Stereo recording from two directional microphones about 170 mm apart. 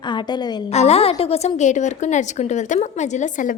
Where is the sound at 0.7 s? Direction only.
40° left (ahead or behind).